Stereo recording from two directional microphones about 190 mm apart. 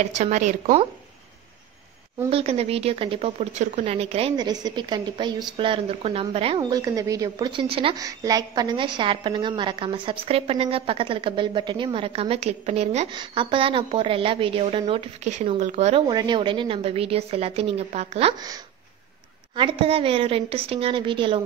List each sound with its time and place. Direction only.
0.0 s a woman's voice: 40° right (ahead or behind)
2.2 s a woman's voice: 30° right (ahead or behind)
6.6 s a woman's voice: 20° right (ahead or behind); by 16.0 s 35° right (ahead or behind)
16.1 s a woman's voice: 20° right (ahead or behind)
19.5 s a woman's voice: 30° right (ahead or behind)